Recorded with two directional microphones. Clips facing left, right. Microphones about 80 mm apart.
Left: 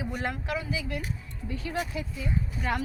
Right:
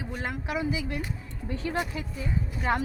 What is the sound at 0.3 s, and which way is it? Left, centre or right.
Speech, centre.